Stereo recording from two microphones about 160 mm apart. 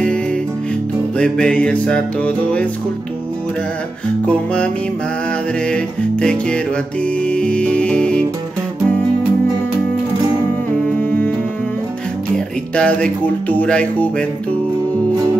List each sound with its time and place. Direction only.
1.1 s music: 5° left (ahead or behind)
5.7 s music: 5° left (ahead or behind)
11.0 s music: 10° left (ahead or behind)
12.7 s music: 5° left (ahead or behind)